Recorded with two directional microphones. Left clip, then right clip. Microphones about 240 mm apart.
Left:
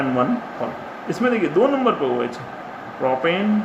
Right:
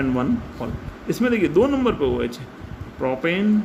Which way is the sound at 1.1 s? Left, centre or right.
Right.